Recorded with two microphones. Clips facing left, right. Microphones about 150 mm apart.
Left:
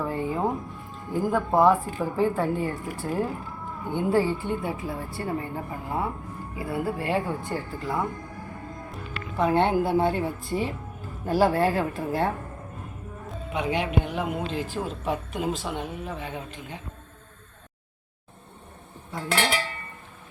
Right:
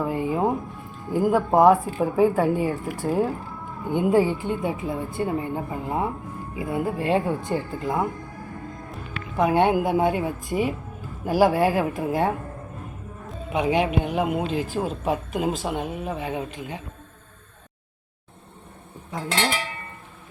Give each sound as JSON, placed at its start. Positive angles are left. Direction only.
{"t": 0.0, "sound": "a woman's voice", "side_deg": -15}
{"t": 9.4, "sound": "speech", "side_deg": -15}
{"t": 13.5, "sound": "speech", "side_deg": -15}